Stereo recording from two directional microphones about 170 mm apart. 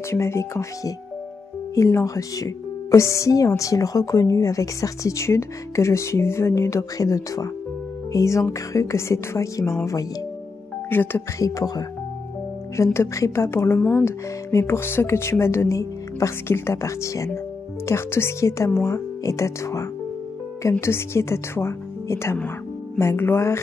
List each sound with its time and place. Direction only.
0.1 s speech: 15° left (ahead or behind)
10.9 s speech: 10° left (ahead or behind)